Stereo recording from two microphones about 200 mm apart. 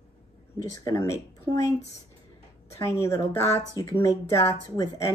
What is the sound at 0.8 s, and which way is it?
Speech, 15° left (ahead or behind).